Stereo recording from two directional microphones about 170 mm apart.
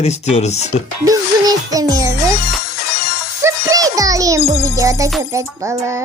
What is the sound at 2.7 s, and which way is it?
Music, 70° left (ahead or behind).